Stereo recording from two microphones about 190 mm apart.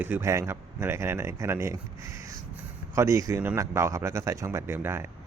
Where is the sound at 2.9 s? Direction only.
15° right (ahead or behind).